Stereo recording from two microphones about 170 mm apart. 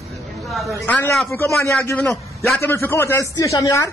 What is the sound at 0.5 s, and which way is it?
Speech, centre (ahead or behind).